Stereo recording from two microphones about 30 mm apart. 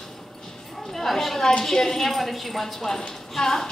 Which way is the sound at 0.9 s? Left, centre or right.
Centre.